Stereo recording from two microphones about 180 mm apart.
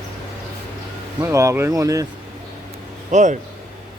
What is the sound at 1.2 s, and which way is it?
Speech, 15° right (ahead or behind).